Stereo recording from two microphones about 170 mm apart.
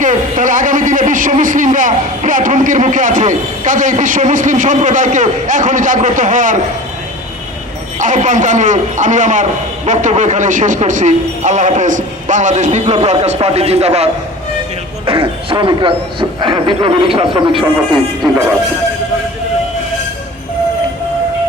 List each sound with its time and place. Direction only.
0.0 s speech: 50° right (ahead or behind)
7.9 s a man's voice: 45° right (ahead or behind)
18.2 s speech: centre (ahead or behind)